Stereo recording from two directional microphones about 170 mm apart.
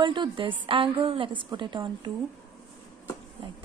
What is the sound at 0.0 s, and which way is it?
A woman's voice, 30° right (ahead or behind).